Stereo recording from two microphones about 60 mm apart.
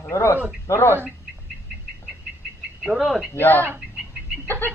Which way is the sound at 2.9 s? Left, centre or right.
Centre.